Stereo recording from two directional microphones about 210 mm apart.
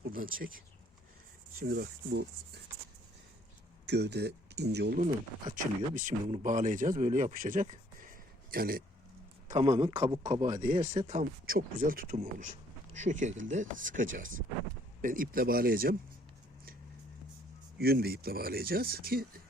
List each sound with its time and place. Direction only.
0.0 s speech: 40° right (ahead or behind)
3.8 s speech: 55° right (ahead or behind)
4.9 s speech: 35° right (ahead or behind)
9.6 s a man's voice: 15° right (ahead or behind)
10.3 s speech: 35° right (ahead or behind)
11.4 s speech: 40° right (ahead or behind)
17.7 s speech: 45° right (ahead or behind)